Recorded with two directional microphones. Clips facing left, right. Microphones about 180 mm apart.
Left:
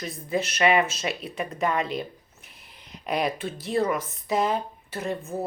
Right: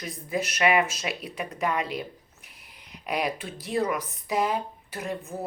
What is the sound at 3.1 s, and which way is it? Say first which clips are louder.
Speech: left 2 dB; 10° right (ahead or behind).